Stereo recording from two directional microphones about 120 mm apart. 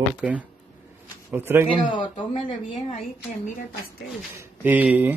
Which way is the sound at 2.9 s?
90° left.